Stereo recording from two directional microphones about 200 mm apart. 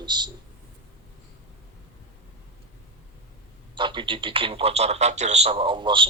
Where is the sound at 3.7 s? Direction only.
25° right (ahead or behind).